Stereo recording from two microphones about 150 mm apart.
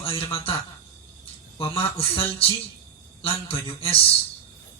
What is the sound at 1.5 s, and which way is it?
Speech, 35° left (ahead or behind).